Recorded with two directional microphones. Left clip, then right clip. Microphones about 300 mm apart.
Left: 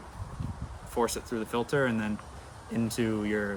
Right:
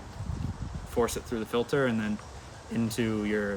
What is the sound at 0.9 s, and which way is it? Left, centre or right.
Speech, centre.